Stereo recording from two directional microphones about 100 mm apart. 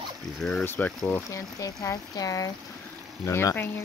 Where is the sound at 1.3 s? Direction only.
35° left (ahead or behind).